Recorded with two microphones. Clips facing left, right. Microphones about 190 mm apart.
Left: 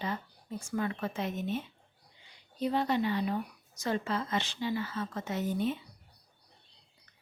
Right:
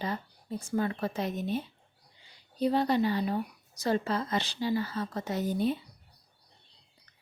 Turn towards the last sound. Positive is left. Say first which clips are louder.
# right 3 dB
turn(degrees=-35)  # may be behind; listen again after turning